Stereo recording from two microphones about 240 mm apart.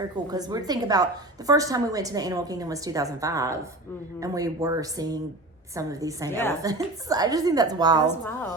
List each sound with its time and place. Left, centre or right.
0.3 s a woman's voice: centre
6.3 s a woman's voice: centre
6.6 s a woman's voice: centre
8.0 s a woman's voice: centre